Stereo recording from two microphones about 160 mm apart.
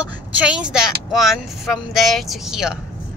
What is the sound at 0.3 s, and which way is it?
Speech, 5° right (ahead or behind).